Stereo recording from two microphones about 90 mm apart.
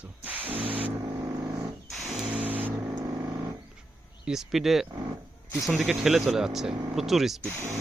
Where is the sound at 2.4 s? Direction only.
20° right (ahead or behind).